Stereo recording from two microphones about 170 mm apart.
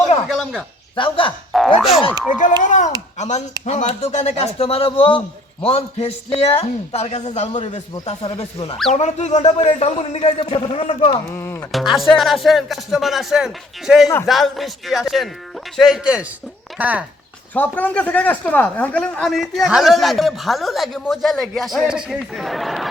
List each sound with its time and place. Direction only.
0.3 s speech: centre (ahead or behind)
0.9 s a man's voice: 30° left (ahead or behind)
1.8 s speech: centre (ahead or behind)
2.6 s a man's voice: 45° left (ahead or behind)
11.3 s speech: 10° left (ahead or behind)
11.7 s speech: centre (ahead or behind)
17.5 s speech: 10° left (ahead or behind)